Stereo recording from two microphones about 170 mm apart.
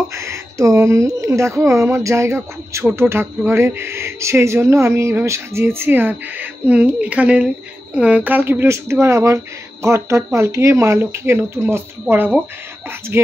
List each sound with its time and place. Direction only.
0.1 s speech: 15° right (ahead or behind)